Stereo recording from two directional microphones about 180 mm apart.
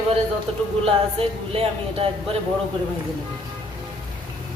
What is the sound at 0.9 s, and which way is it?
Speech, 30° right (ahead or behind).